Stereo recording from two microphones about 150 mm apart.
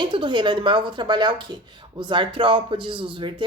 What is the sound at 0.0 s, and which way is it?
Speech, 35° right (ahead or behind).